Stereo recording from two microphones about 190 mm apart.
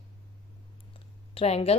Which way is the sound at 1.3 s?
30° left (ahead or behind).